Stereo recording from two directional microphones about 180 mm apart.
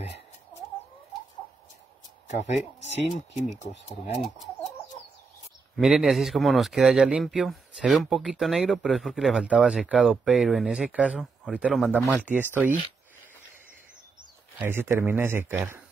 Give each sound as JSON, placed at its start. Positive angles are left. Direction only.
{"t": 2.2, "sound": "speech", "side_deg": 40}
{"t": 5.8, "sound": "speech", "side_deg": 0}
{"t": 14.6, "sound": "speech", "side_deg": -10}